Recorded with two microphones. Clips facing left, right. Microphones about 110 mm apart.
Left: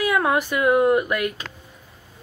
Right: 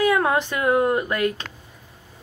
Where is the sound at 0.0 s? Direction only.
30° right (ahead or behind).